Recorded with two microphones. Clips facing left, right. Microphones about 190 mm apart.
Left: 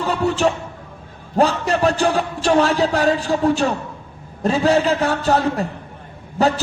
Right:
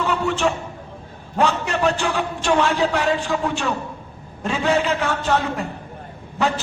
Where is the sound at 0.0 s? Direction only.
35° left (ahead or behind).